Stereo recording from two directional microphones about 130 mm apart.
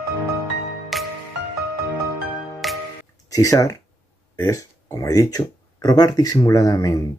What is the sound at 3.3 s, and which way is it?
Speech, 25° left (ahead or behind).